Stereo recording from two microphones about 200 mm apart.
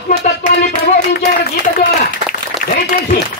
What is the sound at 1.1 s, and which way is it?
Speech, 55° left (ahead or behind).